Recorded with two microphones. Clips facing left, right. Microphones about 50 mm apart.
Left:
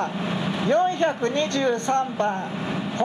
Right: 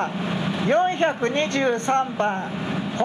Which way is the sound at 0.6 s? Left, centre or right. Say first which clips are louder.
Right 1 dB; right.